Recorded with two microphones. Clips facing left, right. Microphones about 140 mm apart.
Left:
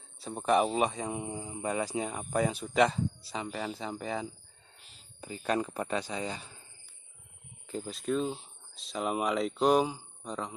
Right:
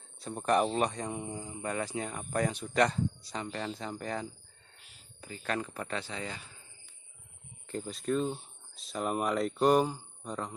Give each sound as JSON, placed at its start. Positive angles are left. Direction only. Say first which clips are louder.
{"t": 0.2, "sound": "speech", "louder": "left 1 dB", "side_deg": 5}
{"t": 5.2, "sound": "speech", "louder": "left 4 dB", "side_deg": 15}
{"t": 7.6, "sound": "speech", "louder": "even", "side_deg": 5}